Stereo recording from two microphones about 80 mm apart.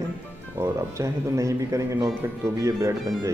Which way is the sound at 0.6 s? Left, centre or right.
Right.